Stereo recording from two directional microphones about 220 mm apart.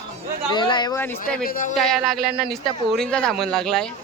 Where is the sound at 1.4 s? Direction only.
40° left (ahead or behind).